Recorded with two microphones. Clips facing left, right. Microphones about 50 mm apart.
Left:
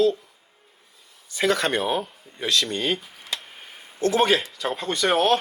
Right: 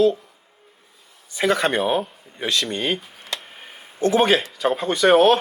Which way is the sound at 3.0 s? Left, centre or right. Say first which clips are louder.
Right 1 dB; centre.